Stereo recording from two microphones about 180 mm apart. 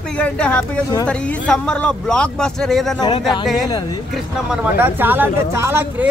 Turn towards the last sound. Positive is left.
turn(degrees=-15)  # may be behind; listen again after turning